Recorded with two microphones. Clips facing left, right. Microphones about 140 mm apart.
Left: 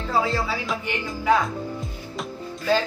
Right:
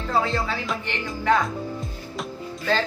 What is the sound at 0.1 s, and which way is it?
Speech, centre (ahead or behind).